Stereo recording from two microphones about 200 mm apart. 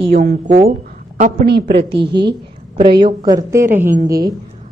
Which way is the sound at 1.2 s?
40° right (ahead or behind).